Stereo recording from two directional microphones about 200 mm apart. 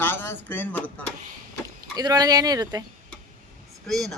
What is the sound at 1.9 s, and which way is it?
Speech, 20° right (ahead or behind).